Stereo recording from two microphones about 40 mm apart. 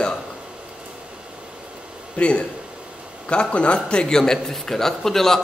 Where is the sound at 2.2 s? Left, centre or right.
Left.